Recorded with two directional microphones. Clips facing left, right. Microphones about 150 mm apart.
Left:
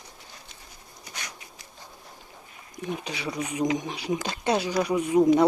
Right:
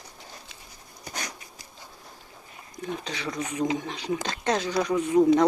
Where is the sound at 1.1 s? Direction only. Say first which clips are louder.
Right 4 dB; 40° right (ahead or behind).